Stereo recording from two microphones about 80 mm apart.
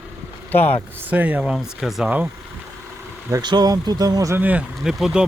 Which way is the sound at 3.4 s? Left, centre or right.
Right.